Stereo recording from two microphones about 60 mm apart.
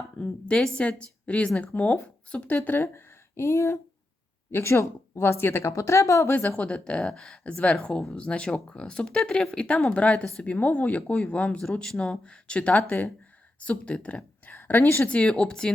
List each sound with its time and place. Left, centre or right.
0.2 s speech: centre
2.7 s speech: left
5.7 s speech: left
6.6 s speech: centre
7.4 s speech: centre
10.0 s speech: left
14.5 s a woman's voice: left
15.0 s speech: centre